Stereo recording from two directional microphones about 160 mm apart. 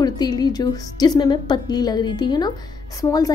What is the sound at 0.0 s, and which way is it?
A woman's voice, 25° left (ahead or behind).